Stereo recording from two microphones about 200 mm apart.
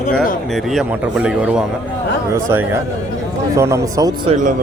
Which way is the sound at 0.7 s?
5° right (ahead or behind).